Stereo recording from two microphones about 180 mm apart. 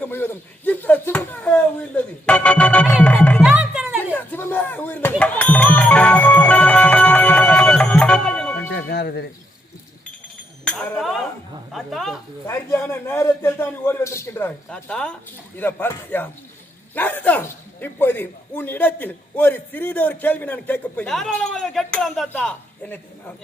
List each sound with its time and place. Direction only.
0.0 s a sound: 10° left (ahead or behind)
2.9 s music: 5° left (ahead or behind)
3.4 s music: 5° right (ahead or behind)
4.1 s music: 10° left (ahead or behind)
8.9 s music: 65° left (ahead or behind)
10.7 s chink: centre (ahead or behind)
11.7 s a sound: centre (ahead or behind)
12.5 s a sound: 10° left (ahead or behind)
15.5 s a man's voice: 10° left (ahead or behind)